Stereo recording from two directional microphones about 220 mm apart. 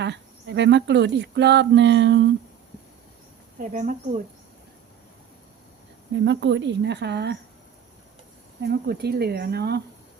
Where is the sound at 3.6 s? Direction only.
35° right (ahead or behind).